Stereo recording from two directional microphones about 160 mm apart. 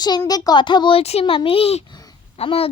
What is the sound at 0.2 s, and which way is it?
A child's voice, 25° left (ahead or behind).